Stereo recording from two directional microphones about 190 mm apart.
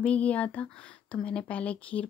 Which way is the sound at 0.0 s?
5° left (ahead or behind).